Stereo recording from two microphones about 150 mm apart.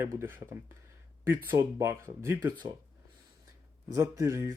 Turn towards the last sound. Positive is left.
turn(degrees=-20)  # may be behind; listen again after turning